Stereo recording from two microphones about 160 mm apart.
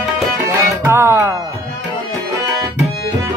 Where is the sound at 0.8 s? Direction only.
15° right (ahead or behind).